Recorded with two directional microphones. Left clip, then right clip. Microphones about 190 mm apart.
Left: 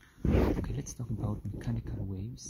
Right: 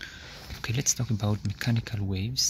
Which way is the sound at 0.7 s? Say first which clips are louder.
Right 13 dB; centre (ahead or behind).